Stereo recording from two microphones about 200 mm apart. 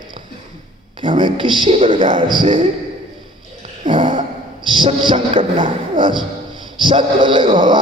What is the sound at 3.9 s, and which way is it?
Speech, 25° right (ahead or behind).